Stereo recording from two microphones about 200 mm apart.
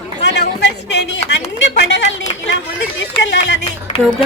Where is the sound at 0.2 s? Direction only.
55° left (ahead or behind).